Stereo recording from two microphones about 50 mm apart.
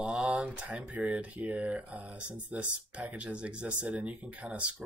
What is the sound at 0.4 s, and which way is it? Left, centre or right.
Speech, right.